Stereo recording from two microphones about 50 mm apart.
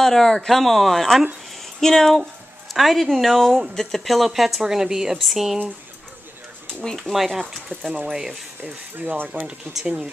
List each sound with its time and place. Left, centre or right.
0.0 s speech: centre
0.6 s a woman's voice: centre
1.6 s a sound: centre
2.7 s a woman's voice: centre
7.0 s a woman's voice: centre
8.6 s speech: right